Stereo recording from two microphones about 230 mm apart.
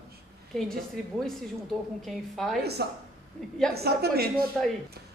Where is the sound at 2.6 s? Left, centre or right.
Right.